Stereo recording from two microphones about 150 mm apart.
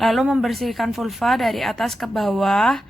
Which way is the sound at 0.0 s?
Centre (ahead or behind).